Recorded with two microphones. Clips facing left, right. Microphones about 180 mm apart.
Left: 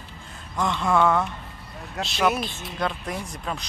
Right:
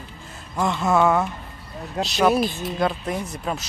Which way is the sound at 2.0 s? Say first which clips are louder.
Right 5 dB; 30° right (ahead or behind).